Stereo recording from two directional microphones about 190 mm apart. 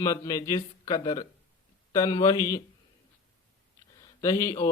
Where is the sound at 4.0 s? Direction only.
20° left (ahead or behind).